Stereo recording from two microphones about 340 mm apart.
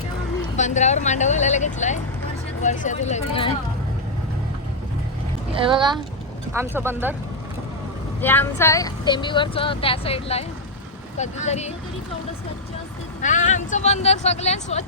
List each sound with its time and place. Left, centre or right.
0.5 s speech: left
5.5 s speech: centre
8.2 s speech: centre
13.2 s speech: left